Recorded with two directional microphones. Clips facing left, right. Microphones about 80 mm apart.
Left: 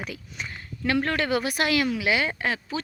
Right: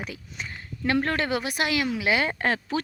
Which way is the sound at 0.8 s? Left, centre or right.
Right.